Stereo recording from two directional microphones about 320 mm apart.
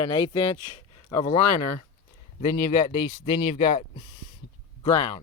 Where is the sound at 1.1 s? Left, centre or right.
Left.